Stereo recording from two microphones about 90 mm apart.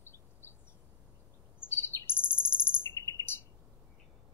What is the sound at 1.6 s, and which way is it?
Chirp, 25° left (ahead or behind).